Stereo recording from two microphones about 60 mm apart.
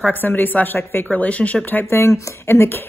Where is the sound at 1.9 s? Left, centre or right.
Left.